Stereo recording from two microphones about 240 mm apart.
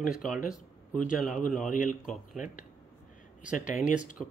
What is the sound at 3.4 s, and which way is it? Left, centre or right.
Speech, centre.